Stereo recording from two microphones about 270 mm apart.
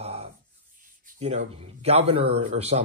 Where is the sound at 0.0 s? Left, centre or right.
Right.